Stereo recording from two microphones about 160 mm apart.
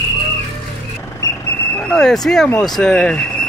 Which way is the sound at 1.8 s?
5° left (ahead or behind).